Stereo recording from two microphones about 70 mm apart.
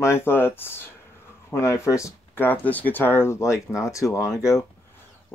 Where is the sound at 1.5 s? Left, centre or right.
Left.